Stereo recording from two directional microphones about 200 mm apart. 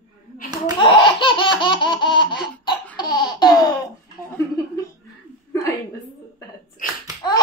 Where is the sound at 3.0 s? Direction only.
20° left (ahead or behind).